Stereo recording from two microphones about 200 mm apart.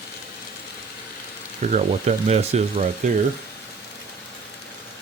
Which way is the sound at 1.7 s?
30° right (ahead or behind).